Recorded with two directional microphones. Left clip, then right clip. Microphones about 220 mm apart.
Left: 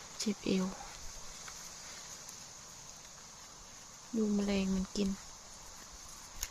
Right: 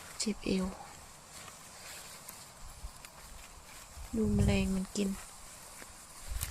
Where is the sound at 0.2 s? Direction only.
Centre (ahead or behind).